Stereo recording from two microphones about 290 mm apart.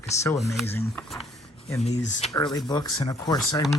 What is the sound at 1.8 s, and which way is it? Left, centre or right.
Speech, left.